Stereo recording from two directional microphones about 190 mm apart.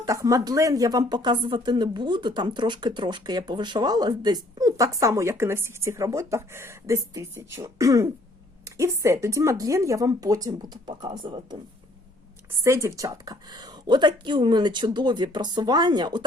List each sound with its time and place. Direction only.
0.0 s speech: 15° right (ahead or behind)
12.6 s speech: 15° right (ahead or behind)